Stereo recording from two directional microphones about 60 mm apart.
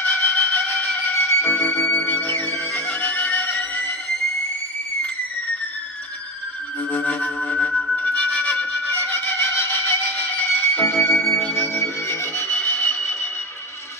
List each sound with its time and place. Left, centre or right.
0.0 s wind instrument: left
1.2 s music: left
6.9 s music: left
11.3 s music: left
11.7 s music: left
12.4 s music: left